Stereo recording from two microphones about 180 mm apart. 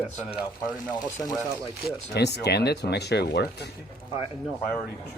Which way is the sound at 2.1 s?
65° left (ahead or behind).